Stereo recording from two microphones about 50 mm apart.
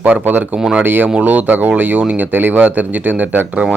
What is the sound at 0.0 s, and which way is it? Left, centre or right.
Speech, right.